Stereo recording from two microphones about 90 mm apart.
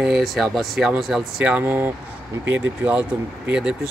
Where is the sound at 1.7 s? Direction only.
25° right (ahead or behind).